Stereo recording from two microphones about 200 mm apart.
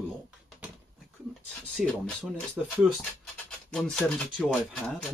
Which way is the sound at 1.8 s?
Centre (ahead or behind).